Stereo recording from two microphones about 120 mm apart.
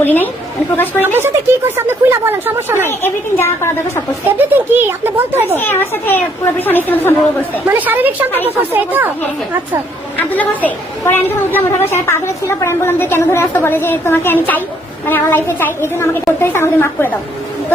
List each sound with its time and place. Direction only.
0.0 s a woman's voice: 15° left (ahead or behind)
1.0 s speech: 15° right (ahead or behind)
3.0 s a woman's voice: 20° left (ahead or behind)
4.4 s speech: 15° right (ahead or behind)
5.5 s a woman's voice: 20° left (ahead or behind)
7.7 s speech: 15° right (ahead or behind)
10.2 s a woman's voice: 15° left (ahead or behind)